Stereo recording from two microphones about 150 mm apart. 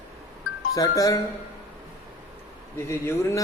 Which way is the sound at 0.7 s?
25° left (ahead or behind).